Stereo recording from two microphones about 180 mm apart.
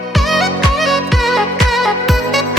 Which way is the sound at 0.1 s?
Centre (ahead or behind).